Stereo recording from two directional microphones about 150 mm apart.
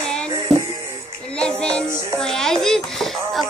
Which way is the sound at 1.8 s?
20° right (ahead or behind).